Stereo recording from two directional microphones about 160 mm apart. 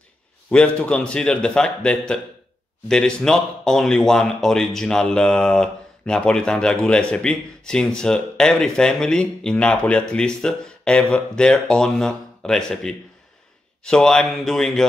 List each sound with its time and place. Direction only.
0.5 s speech: 5° left (ahead or behind)